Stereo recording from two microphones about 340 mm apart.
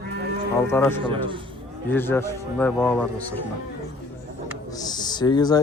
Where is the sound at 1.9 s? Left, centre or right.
Centre.